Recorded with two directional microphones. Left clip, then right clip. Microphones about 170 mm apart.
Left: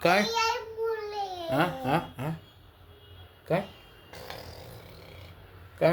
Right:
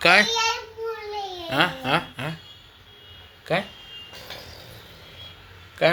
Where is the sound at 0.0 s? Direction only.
5° left (ahead or behind).